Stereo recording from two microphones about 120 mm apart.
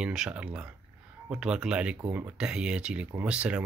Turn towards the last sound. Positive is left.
turn(degrees=-10)  # may be behind; listen again after turning